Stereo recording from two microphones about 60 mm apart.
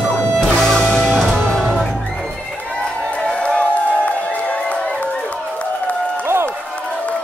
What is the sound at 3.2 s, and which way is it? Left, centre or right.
Music, centre.